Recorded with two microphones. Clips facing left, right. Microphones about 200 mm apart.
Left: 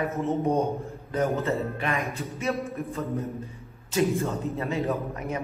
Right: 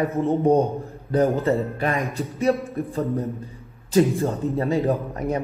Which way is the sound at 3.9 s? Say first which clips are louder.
Right 6 dB; 30° right (ahead or behind).